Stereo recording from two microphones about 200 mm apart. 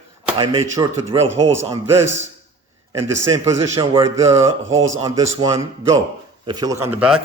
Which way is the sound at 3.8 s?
25° right (ahead or behind).